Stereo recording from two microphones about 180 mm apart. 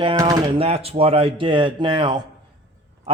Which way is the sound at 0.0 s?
25° right (ahead or behind).